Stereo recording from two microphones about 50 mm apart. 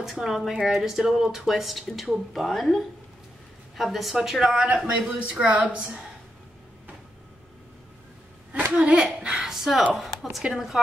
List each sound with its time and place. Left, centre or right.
0.0 s a woman's voice: centre
4.6 s speech: centre
8.7 s a woman's voice: right; by 10.4 s centre